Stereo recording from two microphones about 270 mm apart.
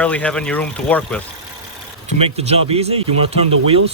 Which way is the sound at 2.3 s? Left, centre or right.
Right.